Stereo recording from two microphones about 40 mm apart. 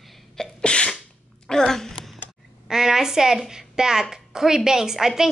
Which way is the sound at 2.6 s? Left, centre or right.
Centre.